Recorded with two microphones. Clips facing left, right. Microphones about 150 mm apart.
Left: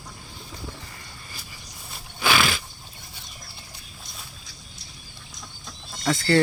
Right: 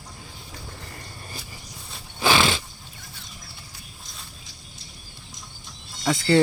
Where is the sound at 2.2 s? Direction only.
25° right (ahead or behind).